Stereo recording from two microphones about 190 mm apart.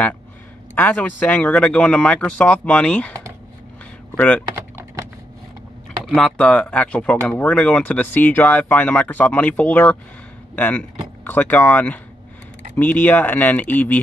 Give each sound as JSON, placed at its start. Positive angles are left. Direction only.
{"t": 0.7, "sound": "speech", "side_deg": 10}
{"t": 4.2, "sound": "speech", "side_deg": 5}
{"t": 4.5, "sound": "typing", "side_deg": -15}
{"t": 6.0, "sound": "speech", "side_deg": 0}